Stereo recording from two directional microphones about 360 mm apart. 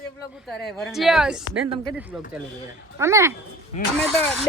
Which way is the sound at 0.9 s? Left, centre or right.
Centre.